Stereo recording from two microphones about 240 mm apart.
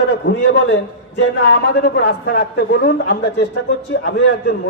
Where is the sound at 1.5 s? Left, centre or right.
Left.